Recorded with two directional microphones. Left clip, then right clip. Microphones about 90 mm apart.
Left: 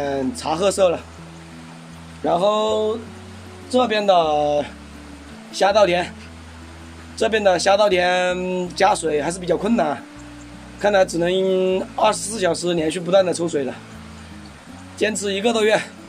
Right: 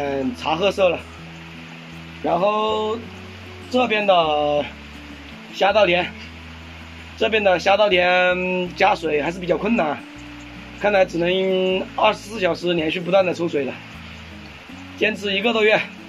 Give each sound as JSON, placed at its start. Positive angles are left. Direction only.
{"t": 0.0, "sound": "speech", "side_deg": 30}
{"t": 2.2, "sound": "a sound", "side_deg": 30}
{"t": 3.7, "sound": "speech", "side_deg": 30}
{"t": 7.2, "sound": "speech", "side_deg": 30}
{"t": 15.0, "sound": "speech", "side_deg": 25}